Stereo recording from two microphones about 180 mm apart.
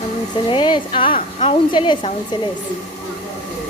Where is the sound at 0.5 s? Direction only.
25° left (ahead or behind).